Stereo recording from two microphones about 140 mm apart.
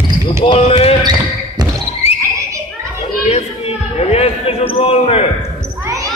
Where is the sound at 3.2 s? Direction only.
50° left (ahead or behind).